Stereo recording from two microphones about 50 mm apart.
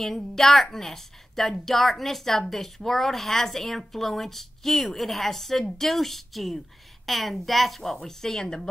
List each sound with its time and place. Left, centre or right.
0.0 s a woman's voice: centre